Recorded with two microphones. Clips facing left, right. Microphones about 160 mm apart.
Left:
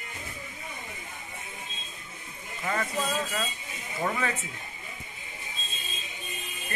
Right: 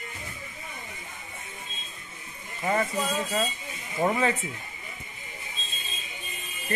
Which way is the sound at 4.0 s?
30° right (ahead or behind).